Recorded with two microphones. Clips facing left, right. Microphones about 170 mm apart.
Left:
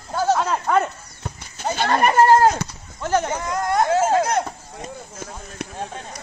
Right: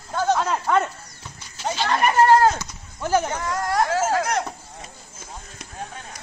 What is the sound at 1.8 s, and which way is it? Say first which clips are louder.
Speech: left 2 dB; 40° left (ahead or behind).